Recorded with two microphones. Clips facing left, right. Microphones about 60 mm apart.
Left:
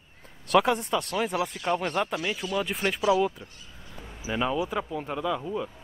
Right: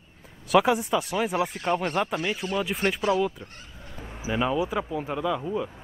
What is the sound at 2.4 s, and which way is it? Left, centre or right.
Speech, right.